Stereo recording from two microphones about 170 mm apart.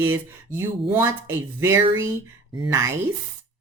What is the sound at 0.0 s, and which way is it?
A woman's voice, 10° right (ahead or behind).